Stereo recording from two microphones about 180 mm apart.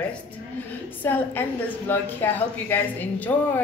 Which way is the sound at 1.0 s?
10° left (ahead or behind).